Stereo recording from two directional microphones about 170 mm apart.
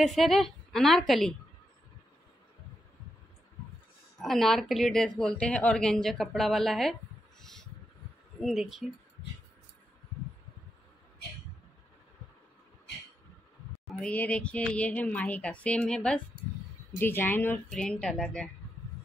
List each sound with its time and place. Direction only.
0.0 s a woman's voice: centre (ahead or behind)
4.2 s a woman's voice: centre (ahead or behind)
13.9 s speech: 10° left (ahead or behind)